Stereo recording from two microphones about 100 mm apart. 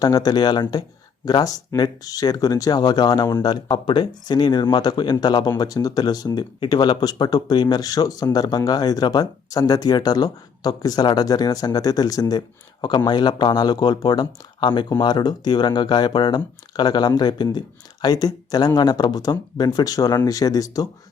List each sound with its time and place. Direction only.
0.0 s speech: 40° left (ahead or behind)